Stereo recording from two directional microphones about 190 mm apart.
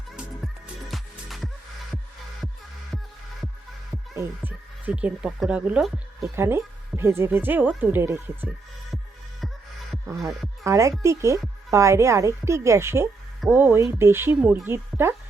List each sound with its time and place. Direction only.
0.2 s music: centre (ahead or behind)
4.1 s speech: 10° right (ahead or behind)
10.1 s speech: 15° right (ahead or behind)